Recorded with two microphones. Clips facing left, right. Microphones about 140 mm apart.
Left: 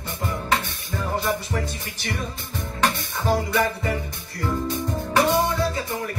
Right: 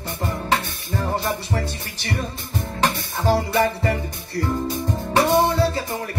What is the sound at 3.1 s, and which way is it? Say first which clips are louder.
Music: right 3 dB; 30° right (ahead or behind).